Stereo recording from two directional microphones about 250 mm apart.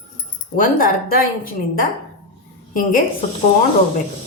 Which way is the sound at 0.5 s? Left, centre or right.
Left.